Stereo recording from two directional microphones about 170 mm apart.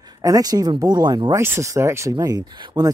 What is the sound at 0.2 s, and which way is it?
Speech, 20° right (ahead or behind).